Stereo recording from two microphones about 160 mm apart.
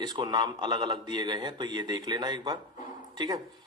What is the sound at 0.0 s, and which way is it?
Speech, 25° right (ahead or behind).